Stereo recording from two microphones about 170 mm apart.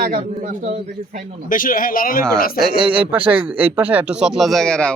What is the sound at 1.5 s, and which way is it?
Speech, 55° left (ahead or behind).